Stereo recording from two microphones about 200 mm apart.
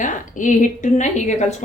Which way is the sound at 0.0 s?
40° left (ahead or behind).